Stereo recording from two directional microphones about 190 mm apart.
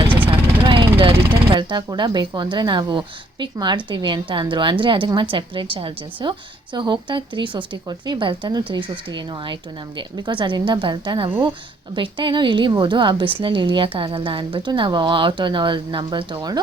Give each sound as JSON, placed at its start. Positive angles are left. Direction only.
{"t": 0.3, "sound": "vehicle", "side_deg": -25}
{"t": 1.5, "sound": "a woman's voice", "side_deg": -25}